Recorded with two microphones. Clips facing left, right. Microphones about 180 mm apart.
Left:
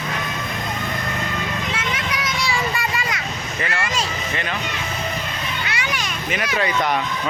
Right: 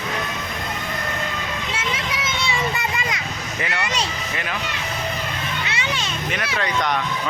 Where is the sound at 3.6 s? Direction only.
20° right (ahead or behind).